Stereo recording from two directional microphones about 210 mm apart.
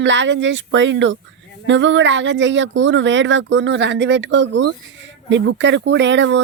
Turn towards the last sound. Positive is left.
turn(degrees=-60)  # may be behind; listen again after turning